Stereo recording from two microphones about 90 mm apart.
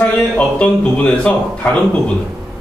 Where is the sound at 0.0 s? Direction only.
15° left (ahead or behind).